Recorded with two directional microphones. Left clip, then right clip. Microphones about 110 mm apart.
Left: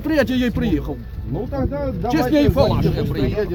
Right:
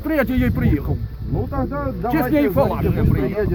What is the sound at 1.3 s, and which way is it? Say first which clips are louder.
Speech: even; 25° left (ahead or behind).